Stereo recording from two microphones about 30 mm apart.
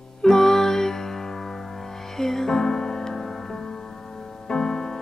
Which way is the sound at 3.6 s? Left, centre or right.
Left.